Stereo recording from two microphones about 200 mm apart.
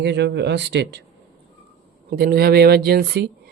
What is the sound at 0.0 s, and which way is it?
Speech, 60° right (ahead or behind).